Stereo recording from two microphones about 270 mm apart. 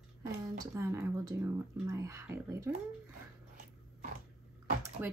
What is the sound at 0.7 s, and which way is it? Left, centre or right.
Speech, centre.